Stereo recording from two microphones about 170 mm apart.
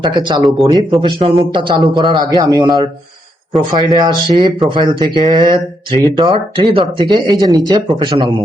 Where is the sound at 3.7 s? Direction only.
25° right (ahead or behind).